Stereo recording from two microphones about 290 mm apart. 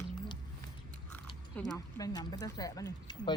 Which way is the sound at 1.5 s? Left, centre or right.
Centre.